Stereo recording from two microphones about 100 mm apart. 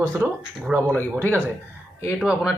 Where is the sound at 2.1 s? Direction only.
5° right (ahead or behind).